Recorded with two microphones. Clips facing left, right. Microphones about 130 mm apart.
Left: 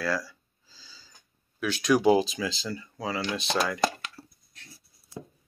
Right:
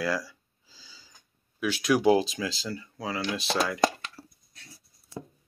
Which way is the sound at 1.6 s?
5° right (ahead or behind).